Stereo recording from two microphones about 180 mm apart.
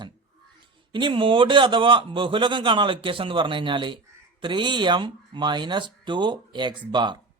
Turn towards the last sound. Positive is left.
turn(degrees=-25)  # may be behind; listen again after turning